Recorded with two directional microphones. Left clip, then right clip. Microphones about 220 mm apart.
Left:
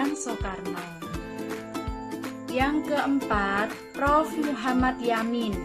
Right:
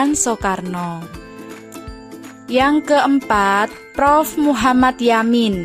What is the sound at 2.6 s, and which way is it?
Speech, 50° right (ahead or behind).